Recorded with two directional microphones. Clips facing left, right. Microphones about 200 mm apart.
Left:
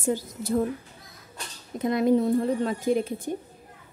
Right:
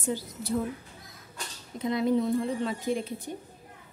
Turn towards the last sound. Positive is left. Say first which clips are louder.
# left 5 dB
turn(degrees=45)  # may be behind; listen again after turning